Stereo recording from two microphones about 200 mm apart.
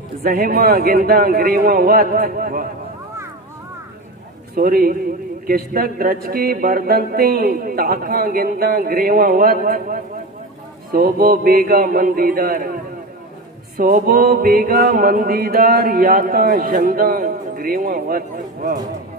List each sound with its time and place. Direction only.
0.2 s chant: 45° right (ahead or behind)
4.6 s chant: 45° right (ahead or behind)
13.7 s chant: 45° right (ahead or behind)